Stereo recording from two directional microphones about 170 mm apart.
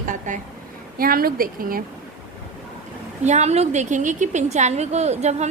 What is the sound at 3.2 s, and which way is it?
A woman's voice, 40° right (ahead or behind).